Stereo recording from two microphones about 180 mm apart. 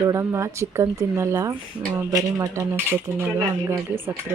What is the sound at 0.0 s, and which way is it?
Speech, 15° right (ahead or behind).